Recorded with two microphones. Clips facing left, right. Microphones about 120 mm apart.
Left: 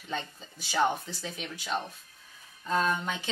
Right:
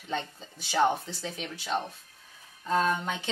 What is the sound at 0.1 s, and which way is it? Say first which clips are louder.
Speech: right 2 dB; 30° right (ahead or behind).